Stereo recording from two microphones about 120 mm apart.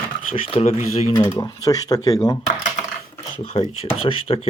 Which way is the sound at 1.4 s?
30° left (ahead or behind).